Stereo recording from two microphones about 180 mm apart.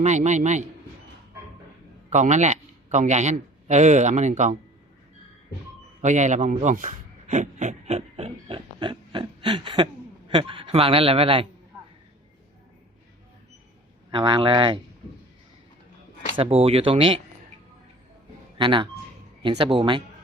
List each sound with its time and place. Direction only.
0.0 s speech: 40° right (ahead or behind)
2.0 s a man's voice: 40° right (ahead or behind)
6.0 s a man's voice: 40° right (ahead or behind)
14.1 s speech: 25° right (ahead or behind)
16.3 s speech: 30° right (ahead or behind)
18.5 s speech: 25° right (ahead or behind)